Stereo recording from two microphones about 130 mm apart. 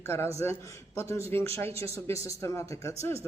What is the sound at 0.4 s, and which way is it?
A man's voice, 20° left (ahead or behind).